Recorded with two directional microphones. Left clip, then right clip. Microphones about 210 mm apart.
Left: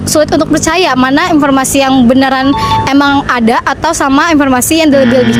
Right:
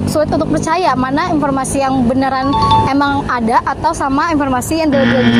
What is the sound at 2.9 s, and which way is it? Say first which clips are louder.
Speech: left 5 dB; 45° left (ahead or behind).